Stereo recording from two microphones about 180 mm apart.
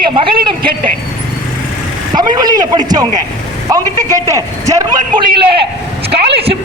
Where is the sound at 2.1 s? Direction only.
25° right (ahead or behind).